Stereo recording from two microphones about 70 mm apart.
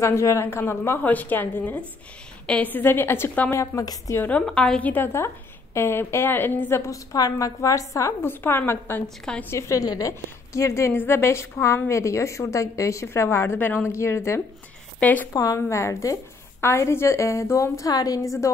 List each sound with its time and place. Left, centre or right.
0.0 s a woman's voice: left
1.0 s a woman's voice: left
3.5 s a woman's voice: left
4.2 s a woman's voice: centre
5.0 s a woman's voice: left
6.9 s a woman's voice: left
8.2 s a woman's voice: left
9.0 s a woman's voice: centre
9.5 s a woman's voice: left
13.6 s a woman's voice: left
13.8 s a woman's voice: left
15.0 s a woman's voice: left
15.3 s a woman's voice: left